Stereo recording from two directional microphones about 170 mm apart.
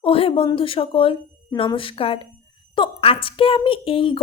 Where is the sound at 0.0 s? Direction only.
35° left (ahead or behind).